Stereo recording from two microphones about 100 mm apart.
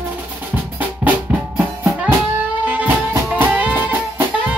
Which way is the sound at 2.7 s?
15° right (ahead or behind).